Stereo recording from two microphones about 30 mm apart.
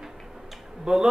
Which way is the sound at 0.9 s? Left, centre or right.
Right.